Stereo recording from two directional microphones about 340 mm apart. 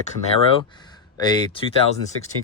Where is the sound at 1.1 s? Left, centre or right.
Centre.